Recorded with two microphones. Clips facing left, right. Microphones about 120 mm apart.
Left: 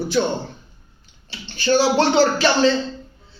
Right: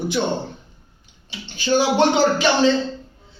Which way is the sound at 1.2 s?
15° right (ahead or behind).